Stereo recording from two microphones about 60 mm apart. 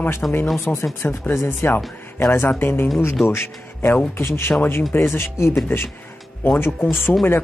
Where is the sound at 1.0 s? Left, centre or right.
Left.